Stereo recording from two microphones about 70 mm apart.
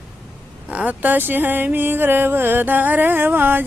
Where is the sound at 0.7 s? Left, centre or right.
Right.